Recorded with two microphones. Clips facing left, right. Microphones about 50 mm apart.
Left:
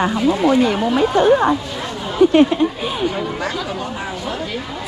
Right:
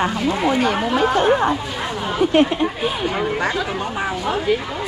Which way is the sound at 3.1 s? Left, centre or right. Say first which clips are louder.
Right 2 dB; centre.